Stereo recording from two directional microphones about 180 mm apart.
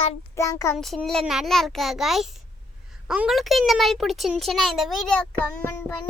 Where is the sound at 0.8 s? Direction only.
Centre (ahead or behind).